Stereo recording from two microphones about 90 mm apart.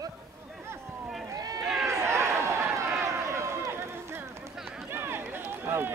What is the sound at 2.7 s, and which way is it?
Run, 30° right (ahead or behind).